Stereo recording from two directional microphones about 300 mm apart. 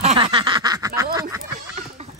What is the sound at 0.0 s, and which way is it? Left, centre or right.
Snicker, centre.